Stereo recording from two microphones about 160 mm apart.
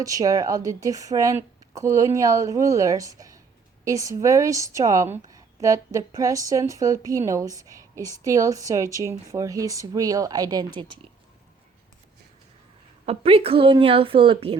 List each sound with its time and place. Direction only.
0.0 s speech: 20° right (ahead or behind)
13.1 s a woman's voice: 35° right (ahead or behind)